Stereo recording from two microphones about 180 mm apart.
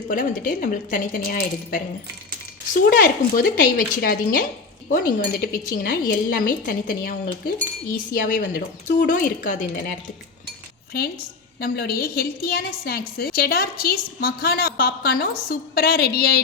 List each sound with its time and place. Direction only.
0.1 s a woman's voice: 50° left (ahead or behind)
3.0 s a woman's voice: 50° left (ahead or behind)
10.9 s a woman's voice: 55° left (ahead or behind)